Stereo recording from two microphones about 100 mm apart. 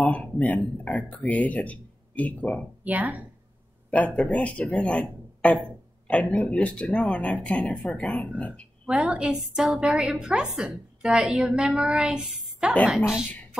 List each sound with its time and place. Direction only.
0.0 s speech: 10° left (ahead or behind)
2.8 s a woman's voice: 15° right (ahead or behind)
4.1 s speech: centre (ahead or behind)
4.4 s speech: 10° left (ahead or behind)
8.8 s a woman's voice: 10° right (ahead or behind)